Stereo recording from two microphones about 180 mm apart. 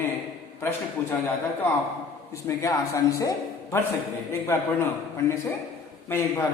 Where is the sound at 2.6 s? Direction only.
15° left (ahead or behind).